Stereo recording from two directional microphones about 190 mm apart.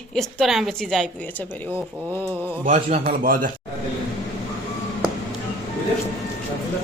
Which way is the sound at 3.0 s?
45° right (ahead or behind).